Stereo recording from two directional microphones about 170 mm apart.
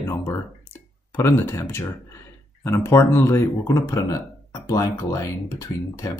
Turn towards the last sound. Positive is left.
turn(degrees=20)  # may be behind; listen again after turning